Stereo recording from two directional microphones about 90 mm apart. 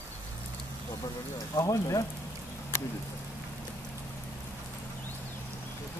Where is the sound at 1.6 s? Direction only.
40° left (ahead or behind).